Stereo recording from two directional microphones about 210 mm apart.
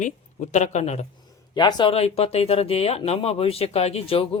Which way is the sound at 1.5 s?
20° left (ahead or behind).